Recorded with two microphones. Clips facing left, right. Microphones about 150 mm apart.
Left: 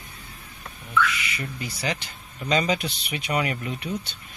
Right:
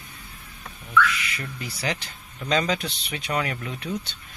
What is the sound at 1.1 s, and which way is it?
Speech, centre (ahead or behind).